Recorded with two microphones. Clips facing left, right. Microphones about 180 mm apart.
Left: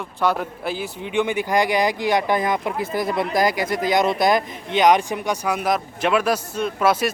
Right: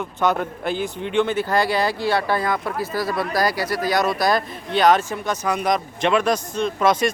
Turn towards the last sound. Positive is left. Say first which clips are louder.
# right 1 dB
turn(degrees=5)  # may be behind; listen again after turning